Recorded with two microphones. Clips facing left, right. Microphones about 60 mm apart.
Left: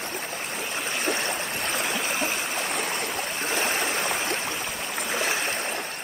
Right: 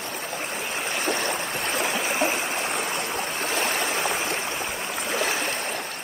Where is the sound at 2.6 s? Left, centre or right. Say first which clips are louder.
Right 1 dB; right.